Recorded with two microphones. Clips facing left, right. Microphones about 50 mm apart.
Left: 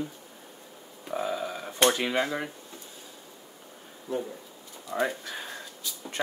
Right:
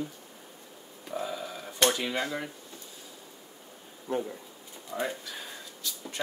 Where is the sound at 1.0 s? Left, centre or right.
Left.